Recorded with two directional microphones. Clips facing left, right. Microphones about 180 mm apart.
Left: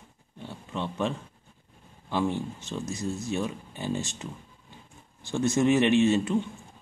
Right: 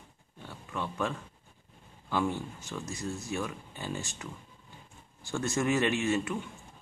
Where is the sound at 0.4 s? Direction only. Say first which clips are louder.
Left 3 dB; 20° left (ahead or behind).